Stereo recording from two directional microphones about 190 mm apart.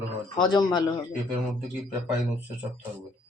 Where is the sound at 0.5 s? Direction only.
25° left (ahead or behind).